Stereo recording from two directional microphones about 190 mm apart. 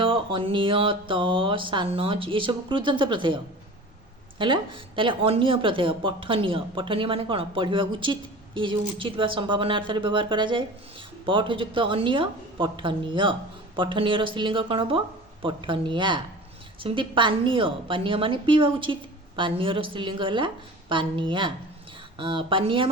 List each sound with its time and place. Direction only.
0.0 s speech: 25° right (ahead or behind)